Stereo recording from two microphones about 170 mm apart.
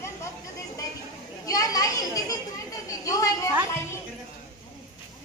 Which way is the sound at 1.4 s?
20° left (ahead or behind).